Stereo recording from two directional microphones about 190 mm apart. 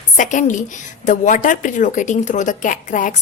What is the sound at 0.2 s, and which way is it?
A woman's voice, 40° left (ahead or behind).